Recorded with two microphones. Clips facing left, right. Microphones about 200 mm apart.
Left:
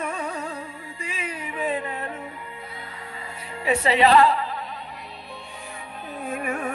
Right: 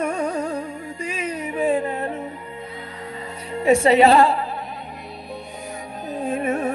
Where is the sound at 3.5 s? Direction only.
45° right (ahead or behind).